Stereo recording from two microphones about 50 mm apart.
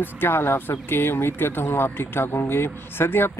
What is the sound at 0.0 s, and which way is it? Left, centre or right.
Speech, left.